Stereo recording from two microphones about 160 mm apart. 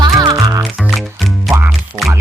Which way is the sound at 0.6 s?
Centre (ahead or behind).